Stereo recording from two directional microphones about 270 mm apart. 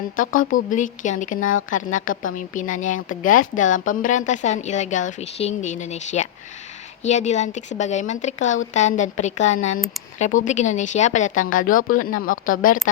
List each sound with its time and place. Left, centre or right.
0.2 s a woman's voice: left
1.4 s a woman's voice: left
1.7 s a woman's voice: left